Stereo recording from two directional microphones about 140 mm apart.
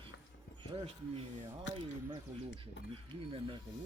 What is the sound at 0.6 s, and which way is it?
Speech, 40° right (ahead or behind).